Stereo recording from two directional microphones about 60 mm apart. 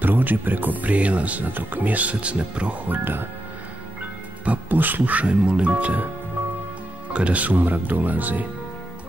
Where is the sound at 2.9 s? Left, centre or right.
Right.